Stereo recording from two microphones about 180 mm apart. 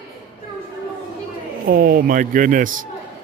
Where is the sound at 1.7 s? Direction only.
55° right (ahead or behind).